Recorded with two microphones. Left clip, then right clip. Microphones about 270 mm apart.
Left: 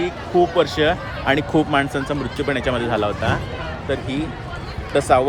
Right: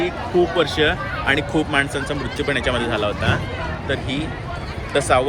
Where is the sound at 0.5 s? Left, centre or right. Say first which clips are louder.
Left 1 dB; left.